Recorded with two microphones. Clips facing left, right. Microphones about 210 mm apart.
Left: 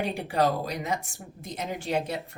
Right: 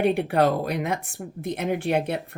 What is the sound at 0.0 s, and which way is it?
Speech, 60° right (ahead or behind).